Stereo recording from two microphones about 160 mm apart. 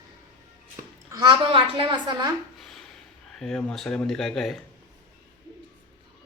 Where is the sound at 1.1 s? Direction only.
25° right (ahead or behind).